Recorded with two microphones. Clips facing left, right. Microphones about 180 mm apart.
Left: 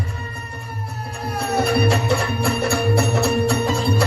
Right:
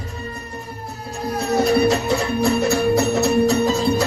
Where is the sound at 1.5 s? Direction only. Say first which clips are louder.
Right 3 dB; 30° left (ahead or behind).